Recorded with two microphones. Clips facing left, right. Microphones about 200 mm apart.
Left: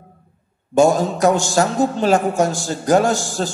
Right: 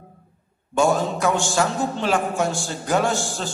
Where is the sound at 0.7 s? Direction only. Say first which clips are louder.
Left 5 dB; 40° left (ahead or behind).